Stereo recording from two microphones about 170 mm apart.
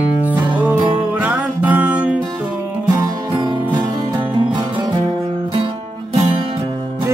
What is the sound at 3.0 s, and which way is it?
Music, 25° right (ahead or behind).